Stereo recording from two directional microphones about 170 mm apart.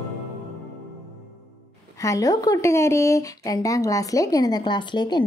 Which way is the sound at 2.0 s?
20° left (ahead or behind).